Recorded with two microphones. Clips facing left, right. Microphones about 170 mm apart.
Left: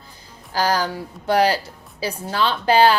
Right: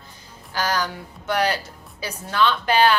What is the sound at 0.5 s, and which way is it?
A woman's voice, 35° left (ahead or behind).